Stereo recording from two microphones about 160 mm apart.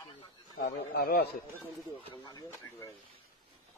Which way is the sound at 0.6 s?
75° left (ahead or behind).